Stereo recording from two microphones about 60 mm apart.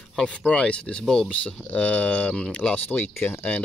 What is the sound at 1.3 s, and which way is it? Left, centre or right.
Speech, left.